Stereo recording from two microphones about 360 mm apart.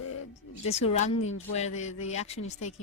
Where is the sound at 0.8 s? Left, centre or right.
Centre.